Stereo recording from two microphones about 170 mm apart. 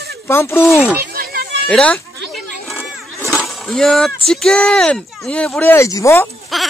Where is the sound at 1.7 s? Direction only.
5° left (ahead or behind).